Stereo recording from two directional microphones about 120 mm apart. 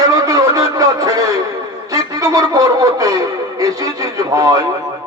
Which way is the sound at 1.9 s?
30° right (ahead or behind).